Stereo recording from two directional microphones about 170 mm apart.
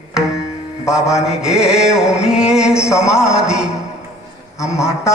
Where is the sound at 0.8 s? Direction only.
5° right (ahead or behind).